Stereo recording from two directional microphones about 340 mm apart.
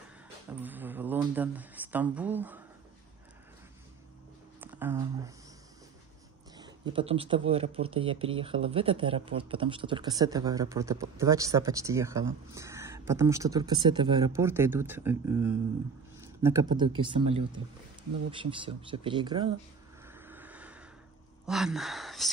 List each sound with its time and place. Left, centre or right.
0.5 s speech: centre
4.6 s speech: centre
6.5 s speech: centre
18.3 s speech: centre
20.1 s vehicle: centre
21.5 s speech: centre